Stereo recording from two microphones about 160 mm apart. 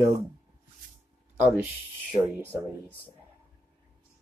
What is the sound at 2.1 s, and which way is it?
Speech, 30° right (ahead or behind).